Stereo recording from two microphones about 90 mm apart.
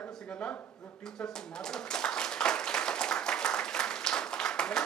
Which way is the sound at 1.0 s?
5° left (ahead or behind).